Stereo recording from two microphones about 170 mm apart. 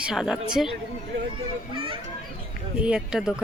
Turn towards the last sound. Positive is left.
turn(degrees=-5)  # may be behind; listen again after turning